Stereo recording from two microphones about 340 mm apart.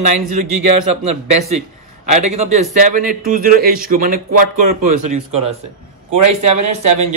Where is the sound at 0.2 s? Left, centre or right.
Right.